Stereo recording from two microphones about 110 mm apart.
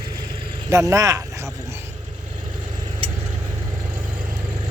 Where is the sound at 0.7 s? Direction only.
30° right (ahead or behind).